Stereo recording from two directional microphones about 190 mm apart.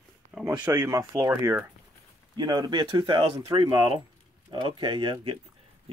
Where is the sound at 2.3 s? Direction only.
20° right (ahead or behind).